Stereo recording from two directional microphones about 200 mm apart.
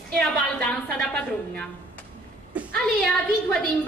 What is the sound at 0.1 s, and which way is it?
A woman's voice, 5° left (ahead or behind).